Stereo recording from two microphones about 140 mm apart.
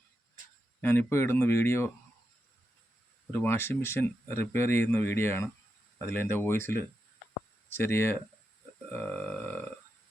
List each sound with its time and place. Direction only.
0.8 s speech: 15° left (ahead or behind)
3.3 s speech: 15° left (ahead or behind)